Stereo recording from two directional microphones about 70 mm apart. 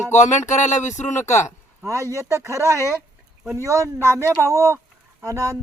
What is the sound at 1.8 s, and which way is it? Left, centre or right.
Speech, right.